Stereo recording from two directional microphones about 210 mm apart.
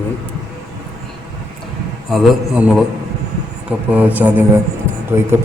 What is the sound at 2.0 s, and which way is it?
A man's voice, centre (ahead or behind).